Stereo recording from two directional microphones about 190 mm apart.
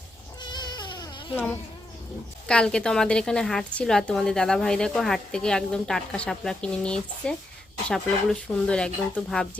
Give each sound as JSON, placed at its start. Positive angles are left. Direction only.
{"t": 0.4, "sound": "cat", "side_deg": 25}
{"t": 2.5, "sound": "a woman's voice", "side_deg": 5}